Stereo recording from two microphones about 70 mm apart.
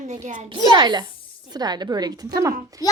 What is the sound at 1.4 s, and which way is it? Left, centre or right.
A child's voice, right.